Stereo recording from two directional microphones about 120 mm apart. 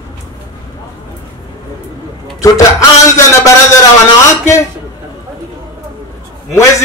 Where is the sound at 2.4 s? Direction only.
25° left (ahead or behind).